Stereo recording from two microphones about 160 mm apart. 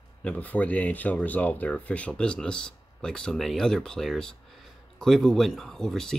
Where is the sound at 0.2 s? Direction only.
10° left (ahead or behind).